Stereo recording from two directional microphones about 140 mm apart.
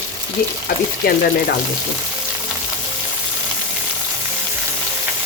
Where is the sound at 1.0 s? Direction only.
90° left.